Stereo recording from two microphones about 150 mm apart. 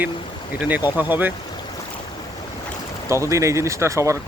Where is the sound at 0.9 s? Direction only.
10° right (ahead or behind).